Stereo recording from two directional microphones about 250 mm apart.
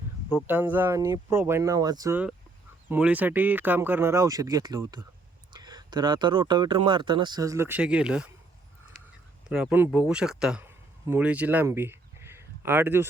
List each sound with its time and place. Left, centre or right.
0.3 s speech: centre
9.5 s speech: centre